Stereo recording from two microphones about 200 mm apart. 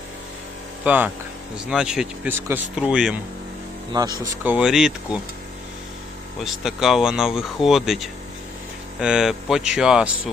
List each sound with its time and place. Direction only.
0.9 s speech: 10° right (ahead or behind)
4.2 s speech: 10° right (ahead or behind)
6.4 s speech: centre (ahead or behind)